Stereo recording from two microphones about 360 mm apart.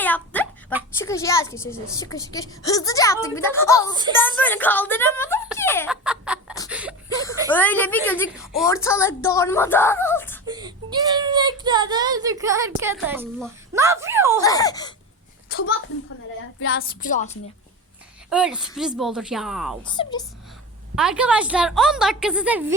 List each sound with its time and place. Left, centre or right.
0.0 s a sound: centre
0.9 s a child's voice: centre
6.7 s a sound: centre
7.1 s a sound: centre
7.5 s a child's voice: centre
10.4 s child singing: centre
14.4 s a child's voice: centre
15.4 s a sound: left
16.6 s speech: left
17.0 s a woman's voice: left
18.3 s a woman's voice: centre
19.8 s a child's voice: centre
20.9 s a woman's voice: centre